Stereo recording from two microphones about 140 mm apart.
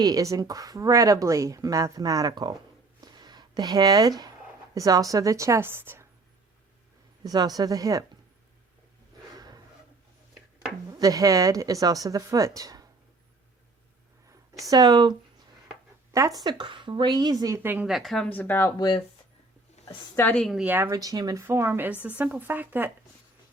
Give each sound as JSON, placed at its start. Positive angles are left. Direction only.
{"t": 0.0, "sound": "speech", "side_deg": -25}
{"t": 3.0, "sound": "a sound", "side_deg": -30}
{"t": 4.7, "sound": "speech", "side_deg": -25}
{"t": 7.3, "sound": "speech", "side_deg": -25}
{"t": 10.9, "sound": "speech", "side_deg": -25}
{"t": 14.7, "sound": "speech", "side_deg": -30}
{"t": 16.1, "sound": "speech", "side_deg": -25}
{"t": 17.8, "sound": "a woman's voice", "side_deg": 0}
{"t": 18.3, "sound": "speech", "side_deg": 15}
{"t": 18.8, "sound": "speech", "side_deg": 35}
{"t": 20.1, "sound": "a woman's voice", "side_deg": 10}
{"t": 20.7, "sound": "speech", "side_deg": -15}
{"t": 20.9, "sound": "speech", "side_deg": -25}